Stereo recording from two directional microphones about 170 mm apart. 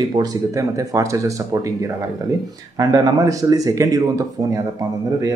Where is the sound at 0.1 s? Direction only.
20° right (ahead or behind).